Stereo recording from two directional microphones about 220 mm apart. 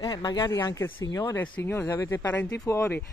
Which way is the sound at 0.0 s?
20° left (ahead or behind).